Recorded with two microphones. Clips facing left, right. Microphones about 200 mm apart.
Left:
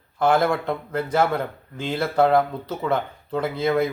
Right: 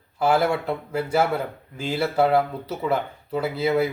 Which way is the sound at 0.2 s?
10° right (ahead or behind).